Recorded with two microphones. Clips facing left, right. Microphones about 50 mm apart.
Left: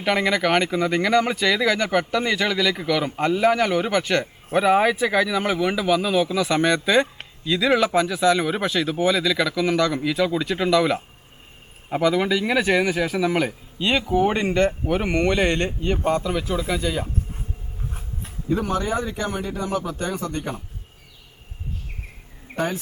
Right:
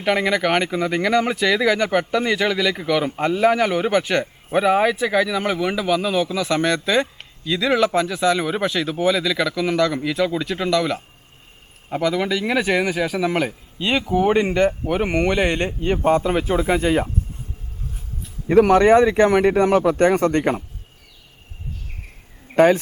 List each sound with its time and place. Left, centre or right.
0.0 s speech: centre; by 17.1 s right
18.4 s speech: right
22.5 s speech: right